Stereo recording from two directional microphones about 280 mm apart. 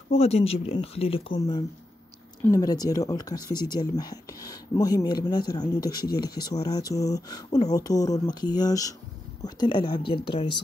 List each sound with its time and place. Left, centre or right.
0.1 s speech: left